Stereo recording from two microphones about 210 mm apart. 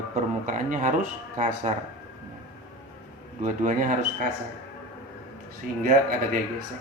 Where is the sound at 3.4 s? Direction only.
40° right (ahead or behind).